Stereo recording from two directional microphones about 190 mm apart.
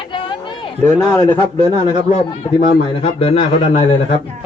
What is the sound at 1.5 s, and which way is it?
Speech, 25° right (ahead or behind).